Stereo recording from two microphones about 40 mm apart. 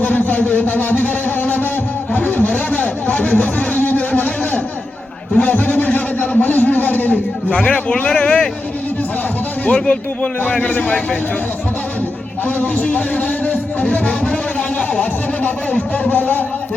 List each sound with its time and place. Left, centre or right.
0.0 s music: left
2.1 s a sound: left
7.5 s a man's voice: left
9.6 s speech: left
12.5 s speech: left
16.0 s speech: left